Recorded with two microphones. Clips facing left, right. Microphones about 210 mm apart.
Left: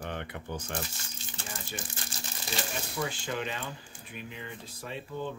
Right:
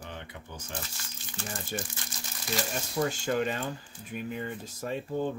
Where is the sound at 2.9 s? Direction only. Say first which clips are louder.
Right 7 dB; 45° right (ahead or behind).